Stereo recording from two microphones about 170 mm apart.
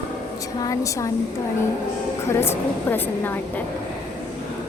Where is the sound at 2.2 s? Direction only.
15° left (ahead or behind).